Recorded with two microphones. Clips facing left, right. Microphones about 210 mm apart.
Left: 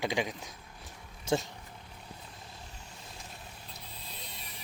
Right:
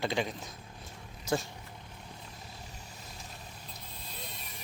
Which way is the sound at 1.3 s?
25° left (ahead or behind).